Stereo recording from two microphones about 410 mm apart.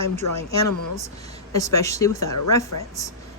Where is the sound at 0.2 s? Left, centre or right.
Left.